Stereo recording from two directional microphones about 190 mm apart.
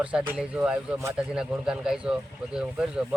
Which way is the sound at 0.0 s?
5° right (ahead or behind).